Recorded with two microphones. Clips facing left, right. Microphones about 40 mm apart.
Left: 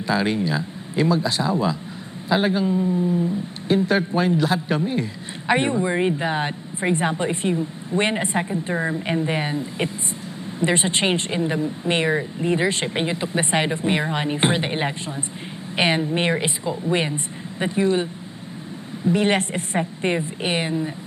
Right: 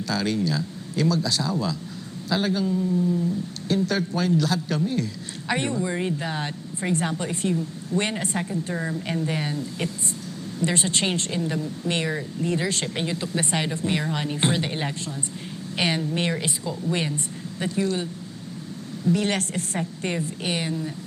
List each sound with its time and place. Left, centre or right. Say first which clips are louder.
0.1 s speech: left 4 dB; left